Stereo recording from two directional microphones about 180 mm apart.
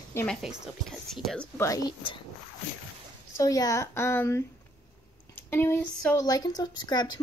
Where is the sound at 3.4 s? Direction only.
20° left (ahead or behind).